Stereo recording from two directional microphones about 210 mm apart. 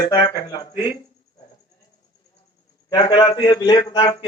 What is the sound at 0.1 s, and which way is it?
Speech, 20° left (ahead or behind).